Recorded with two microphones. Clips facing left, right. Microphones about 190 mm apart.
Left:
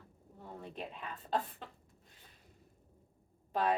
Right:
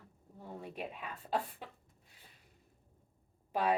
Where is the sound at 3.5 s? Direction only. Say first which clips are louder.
Even; 10° right (ahead or behind).